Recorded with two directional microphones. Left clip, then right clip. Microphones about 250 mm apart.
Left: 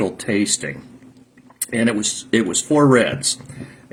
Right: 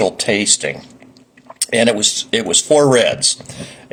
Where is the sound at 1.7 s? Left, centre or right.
Centre.